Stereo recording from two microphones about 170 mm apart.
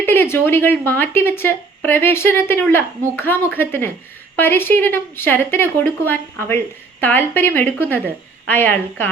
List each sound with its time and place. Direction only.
0.0 s speech: 15° left (ahead or behind)